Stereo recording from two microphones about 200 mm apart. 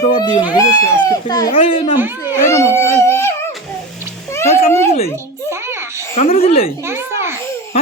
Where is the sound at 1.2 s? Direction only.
20° left (ahead or behind).